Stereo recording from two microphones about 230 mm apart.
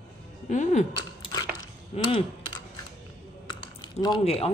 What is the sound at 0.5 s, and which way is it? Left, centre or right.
Speech, left.